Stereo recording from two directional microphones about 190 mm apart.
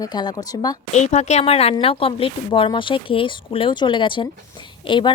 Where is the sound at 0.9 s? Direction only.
35° left (ahead or behind).